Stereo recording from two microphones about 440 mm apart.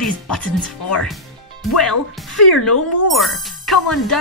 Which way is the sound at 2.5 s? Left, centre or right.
Left.